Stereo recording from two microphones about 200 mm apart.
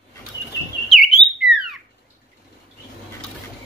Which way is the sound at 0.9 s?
Centre (ahead or behind).